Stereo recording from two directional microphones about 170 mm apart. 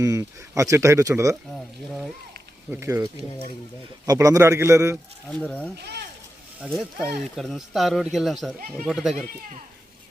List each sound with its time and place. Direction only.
0.0 s speech: 20° right (ahead or behind)
1.5 s speech: centre (ahead or behind)
2.6 s speech: 15° right (ahead or behind)
5.3 s speech: 5° left (ahead or behind)
5.8 s a sound: 75° right (ahead or behind)
6.6 s speech: centre (ahead or behind)